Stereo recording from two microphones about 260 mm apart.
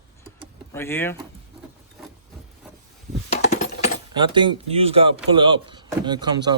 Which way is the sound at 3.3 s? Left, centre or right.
Left.